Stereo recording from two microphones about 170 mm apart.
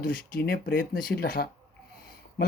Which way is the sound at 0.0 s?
55° left (ahead or behind).